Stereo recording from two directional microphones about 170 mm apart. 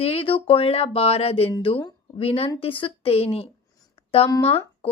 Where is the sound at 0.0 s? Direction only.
35° left (ahead or behind).